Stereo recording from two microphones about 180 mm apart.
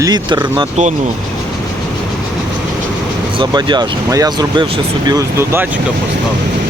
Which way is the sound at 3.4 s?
25° right (ahead or behind).